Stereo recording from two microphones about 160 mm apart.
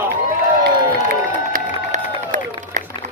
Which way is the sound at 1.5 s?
55° right (ahead or behind).